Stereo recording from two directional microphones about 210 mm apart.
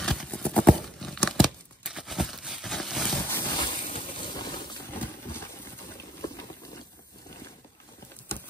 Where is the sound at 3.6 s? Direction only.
25° left (ahead or behind).